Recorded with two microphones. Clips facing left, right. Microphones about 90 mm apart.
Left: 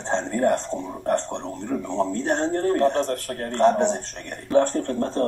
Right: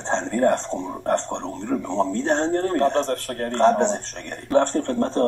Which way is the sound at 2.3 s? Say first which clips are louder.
Even; 10° left (ahead or behind).